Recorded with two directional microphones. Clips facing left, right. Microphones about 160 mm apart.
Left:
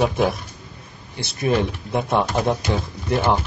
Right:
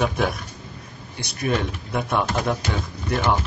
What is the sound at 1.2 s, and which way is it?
A man's voice, 25° left (ahead or behind).